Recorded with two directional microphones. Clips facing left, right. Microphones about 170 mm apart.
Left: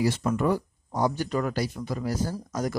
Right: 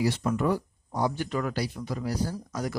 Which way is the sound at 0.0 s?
45° left (ahead or behind).